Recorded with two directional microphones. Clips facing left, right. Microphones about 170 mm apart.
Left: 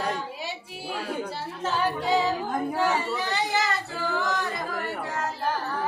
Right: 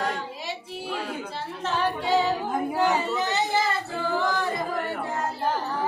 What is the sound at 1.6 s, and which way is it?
Female singing, centre (ahead or behind).